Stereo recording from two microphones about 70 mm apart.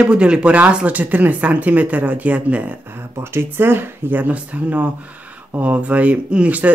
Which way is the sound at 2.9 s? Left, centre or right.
Right.